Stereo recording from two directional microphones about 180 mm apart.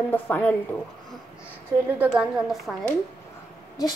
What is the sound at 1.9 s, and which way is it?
Speech, 5° right (ahead or behind).